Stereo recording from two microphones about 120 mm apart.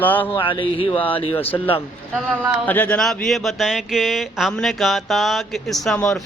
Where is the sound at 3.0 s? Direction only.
Centre (ahead or behind).